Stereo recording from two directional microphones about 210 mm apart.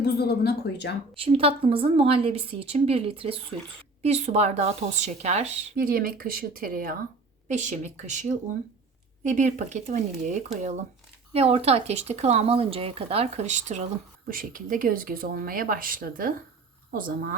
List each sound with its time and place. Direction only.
0.0 s speech: 50° left (ahead or behind)
1.1 s a woman's voice: 25° right (ahead or behind)
5.7 s speech: 45° right (ahead or behind)